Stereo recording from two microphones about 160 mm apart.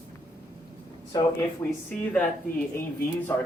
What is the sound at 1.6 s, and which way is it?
Speech, 20° left (ahead or behind).